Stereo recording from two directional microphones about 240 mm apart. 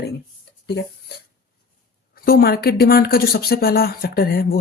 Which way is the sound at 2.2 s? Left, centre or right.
Left.